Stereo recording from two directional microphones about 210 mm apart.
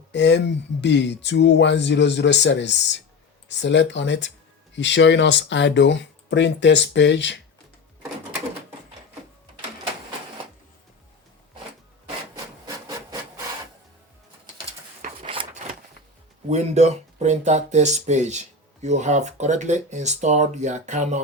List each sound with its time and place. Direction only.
0.1 s speech: 55° left (ahead or behind)
15.0 s a sound: 30° right (ahead or behind)
16.5 s speech: 35° right (ahead or behind)